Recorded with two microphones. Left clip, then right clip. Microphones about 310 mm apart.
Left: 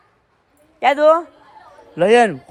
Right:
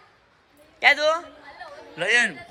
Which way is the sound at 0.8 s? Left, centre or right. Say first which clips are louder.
Left 6 dB; centre.